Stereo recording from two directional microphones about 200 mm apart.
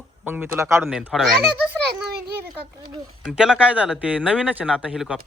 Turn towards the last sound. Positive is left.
turn(degrees=-5)  # may be behind; listen again after turning